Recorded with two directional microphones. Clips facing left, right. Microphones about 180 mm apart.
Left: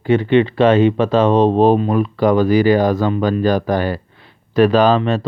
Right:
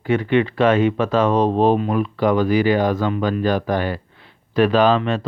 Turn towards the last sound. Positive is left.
turn(degrees=35)  # may be behind; listen again after turning